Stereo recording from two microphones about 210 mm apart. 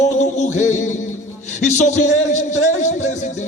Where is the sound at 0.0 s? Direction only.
35° left (ahead or behind).